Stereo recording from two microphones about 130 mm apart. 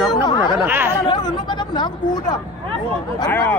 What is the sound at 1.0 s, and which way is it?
Speech, 35° left (ahead or behind).